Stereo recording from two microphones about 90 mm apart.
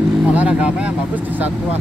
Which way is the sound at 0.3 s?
15° right (ahead or behind).